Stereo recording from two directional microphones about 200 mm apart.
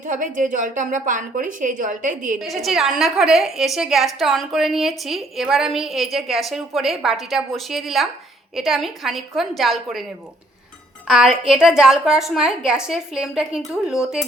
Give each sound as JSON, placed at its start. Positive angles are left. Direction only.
{"t": 0.1, "sound": "a woman's voice", "side_deg": -40}
{"t": 2.4, "sound": "a woman's voice", "side_deg": 0}
{"t": 11.1, "sound": "a woman's voice", "side_deg": -5}